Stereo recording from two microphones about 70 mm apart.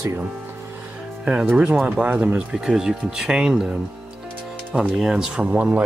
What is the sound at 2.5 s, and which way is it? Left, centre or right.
Speech, centre.